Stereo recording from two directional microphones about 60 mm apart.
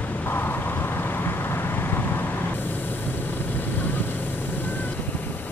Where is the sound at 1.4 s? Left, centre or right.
Left.